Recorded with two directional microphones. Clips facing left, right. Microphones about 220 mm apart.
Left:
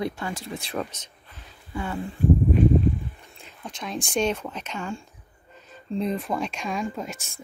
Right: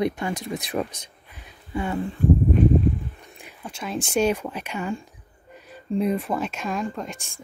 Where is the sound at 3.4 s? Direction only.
10° right (ahead or behind).